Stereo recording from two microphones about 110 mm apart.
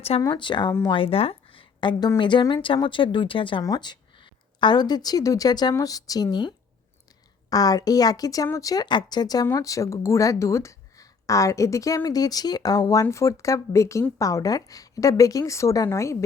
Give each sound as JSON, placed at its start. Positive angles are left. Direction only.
{"t": 0.2, "sound": "a woman's voice", "side_deg": 40}
{"t": 3.6, "sound": "a woman's voice", "side_deg": 40}
{"t": 7.5, "sound": "a woman's voice", "side_deg": 35}